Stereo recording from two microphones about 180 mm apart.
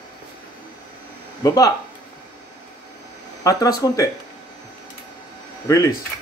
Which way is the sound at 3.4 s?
20° left (ahead or behind).